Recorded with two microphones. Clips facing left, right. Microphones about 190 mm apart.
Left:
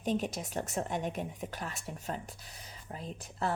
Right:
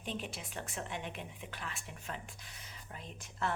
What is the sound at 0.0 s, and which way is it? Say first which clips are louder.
A woman's voice: left 9 dB; 40° left (ahead or behind).